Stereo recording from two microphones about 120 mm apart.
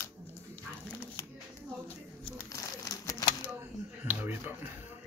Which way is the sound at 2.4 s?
30° left (ahead or behind).